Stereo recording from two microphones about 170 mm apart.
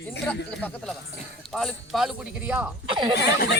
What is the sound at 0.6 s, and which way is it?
Speech, 5° left (ahead or behind).